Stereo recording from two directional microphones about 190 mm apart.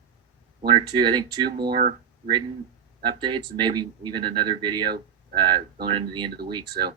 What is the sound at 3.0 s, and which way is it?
Speech, 25° right (ahead or behind).